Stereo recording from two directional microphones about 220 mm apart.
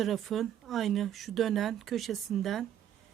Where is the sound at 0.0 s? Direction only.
Centre (ahead or behind).